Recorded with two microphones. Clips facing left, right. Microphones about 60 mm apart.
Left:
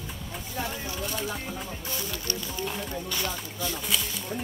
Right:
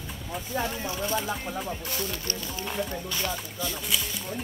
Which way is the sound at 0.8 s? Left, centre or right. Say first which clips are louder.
Right 3 dB; right.